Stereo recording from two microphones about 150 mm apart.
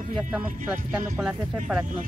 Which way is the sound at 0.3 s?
10° right (ahead or behind).